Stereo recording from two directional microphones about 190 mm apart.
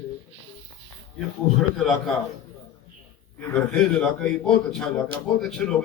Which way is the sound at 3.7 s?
5° left (ahead or behind).